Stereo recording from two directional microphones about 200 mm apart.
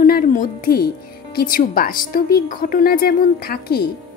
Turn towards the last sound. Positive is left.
turn(degrees=50)  # may be behind; listen again after turning